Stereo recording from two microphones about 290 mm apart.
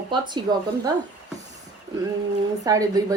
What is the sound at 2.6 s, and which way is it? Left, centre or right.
Speech, centre.